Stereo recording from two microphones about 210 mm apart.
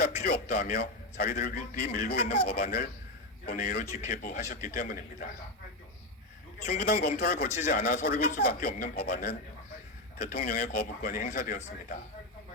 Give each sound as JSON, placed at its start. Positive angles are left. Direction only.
{"t": 0.5, "sound": "a man's voice", "side_deg": 45}
{"t": 6.8, "sound": "speech", "side_deg": 50}